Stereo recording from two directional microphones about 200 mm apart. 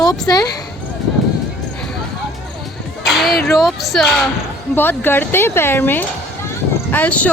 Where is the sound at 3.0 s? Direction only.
Centre (ahead or behind).